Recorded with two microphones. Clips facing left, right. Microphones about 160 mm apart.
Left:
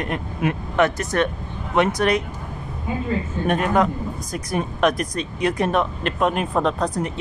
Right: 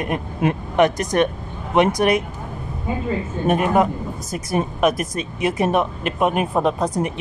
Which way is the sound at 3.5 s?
10° right (ahead or behind).